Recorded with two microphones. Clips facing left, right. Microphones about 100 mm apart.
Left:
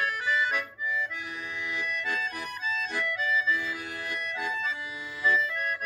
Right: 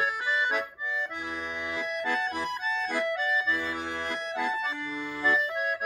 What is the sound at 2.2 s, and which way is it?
Accordion, 30° right (ahead or behind).